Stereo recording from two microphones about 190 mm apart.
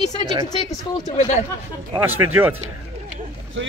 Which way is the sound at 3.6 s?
90° right.